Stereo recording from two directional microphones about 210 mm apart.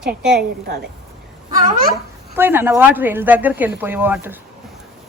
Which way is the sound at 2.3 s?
10° right (ahead or behind).